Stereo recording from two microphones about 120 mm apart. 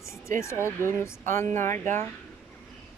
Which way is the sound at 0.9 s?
20° left (ahead or behind).